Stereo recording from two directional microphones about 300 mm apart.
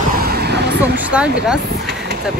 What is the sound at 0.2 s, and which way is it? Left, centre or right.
Vehicle, right.